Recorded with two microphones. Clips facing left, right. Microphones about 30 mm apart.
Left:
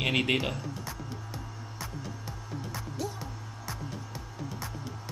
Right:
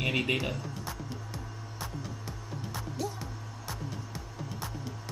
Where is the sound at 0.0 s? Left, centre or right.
Left.